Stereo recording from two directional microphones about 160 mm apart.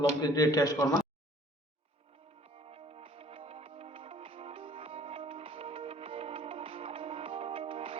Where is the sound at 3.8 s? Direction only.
40° right (ahead or behind).